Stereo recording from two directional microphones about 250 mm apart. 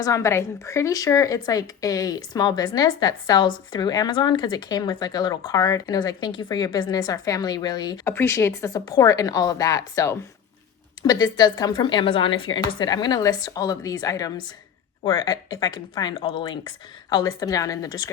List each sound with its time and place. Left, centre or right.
0.0 s a woman's voice: centre